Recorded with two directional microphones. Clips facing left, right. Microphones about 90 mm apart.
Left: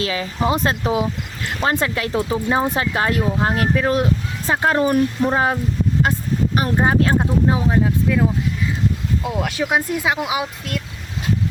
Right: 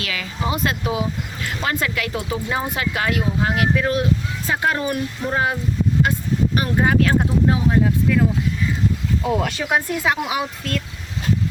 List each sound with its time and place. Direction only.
0.0 s speech: 30° left (ahead or behind)
9.4 s speech: 5° left (ahead or behind)